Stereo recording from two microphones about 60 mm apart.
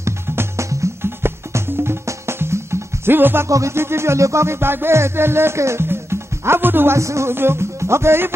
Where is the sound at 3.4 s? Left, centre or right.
Right.